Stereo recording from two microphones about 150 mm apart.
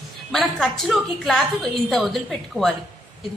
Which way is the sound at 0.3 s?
Centre (ahead or behind).